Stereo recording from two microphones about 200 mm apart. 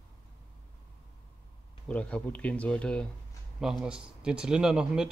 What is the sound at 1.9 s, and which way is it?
Speech, 5° left (ahead or behind).